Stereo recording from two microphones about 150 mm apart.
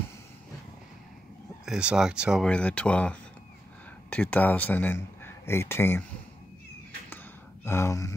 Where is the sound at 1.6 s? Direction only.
5° right (ahead or behind).